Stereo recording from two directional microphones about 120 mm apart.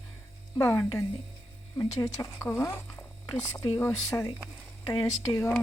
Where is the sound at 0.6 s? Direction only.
25° left (ahead or behind).